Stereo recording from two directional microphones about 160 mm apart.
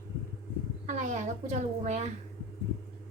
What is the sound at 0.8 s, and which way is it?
A woman's voice, 50° right (ahead or behind).